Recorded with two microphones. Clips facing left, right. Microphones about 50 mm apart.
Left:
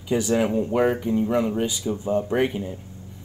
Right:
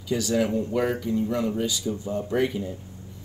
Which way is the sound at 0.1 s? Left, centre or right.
Left.